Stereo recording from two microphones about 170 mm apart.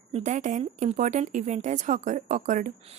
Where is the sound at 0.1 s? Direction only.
45° right (ahead or behind).